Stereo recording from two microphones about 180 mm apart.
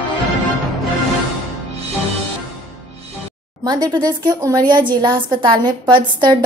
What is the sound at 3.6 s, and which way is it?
A woman's voice, 25° right (ahead or behind).